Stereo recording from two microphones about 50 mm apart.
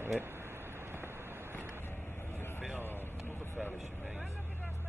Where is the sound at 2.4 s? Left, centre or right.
Left.